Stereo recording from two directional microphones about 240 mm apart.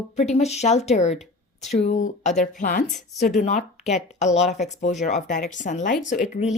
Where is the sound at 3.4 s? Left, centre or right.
Left.